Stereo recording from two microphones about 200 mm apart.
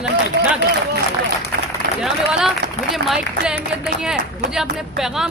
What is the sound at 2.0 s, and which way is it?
A man's voice, centre (ahead or behind).